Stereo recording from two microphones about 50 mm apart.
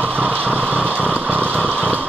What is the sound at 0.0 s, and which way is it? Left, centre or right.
Vehicle, right.